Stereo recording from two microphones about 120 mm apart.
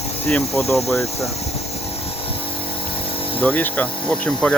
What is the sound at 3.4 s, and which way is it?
Speech, 10° left (ahead or behind).